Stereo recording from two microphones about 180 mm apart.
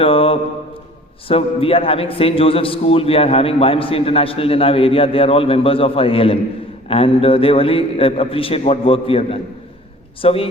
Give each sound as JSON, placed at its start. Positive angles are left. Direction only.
{"t": 0.0, "sound": "mantra", "side_deg": 30}
{"t": 1.3, "sound": "a man's voice", "side_deg": 30}